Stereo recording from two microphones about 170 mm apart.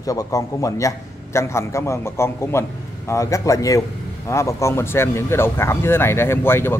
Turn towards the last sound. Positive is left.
turn(degrees=15)  # may be behind; listen again after turning